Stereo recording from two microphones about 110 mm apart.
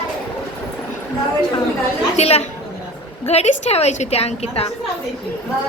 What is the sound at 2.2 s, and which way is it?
Speech, 70° left (ahead or behind).